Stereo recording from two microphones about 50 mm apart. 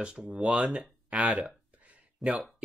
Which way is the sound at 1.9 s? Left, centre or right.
Right.